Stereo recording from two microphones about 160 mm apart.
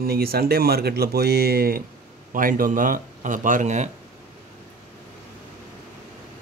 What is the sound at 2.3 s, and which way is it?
Speech, 60° right (ahead or behind).